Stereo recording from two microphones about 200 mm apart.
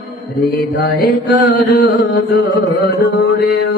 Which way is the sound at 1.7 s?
55° left (ahead or behind).